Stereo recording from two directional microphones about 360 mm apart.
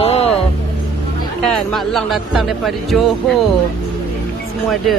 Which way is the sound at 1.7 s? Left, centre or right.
Centre.